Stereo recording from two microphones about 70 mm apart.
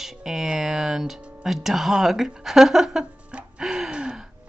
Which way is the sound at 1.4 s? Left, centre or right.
Centre.